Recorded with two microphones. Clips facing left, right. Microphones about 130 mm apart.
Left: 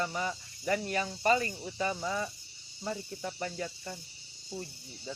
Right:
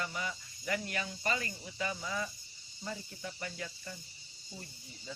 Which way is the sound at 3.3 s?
35° left (ahead or behind).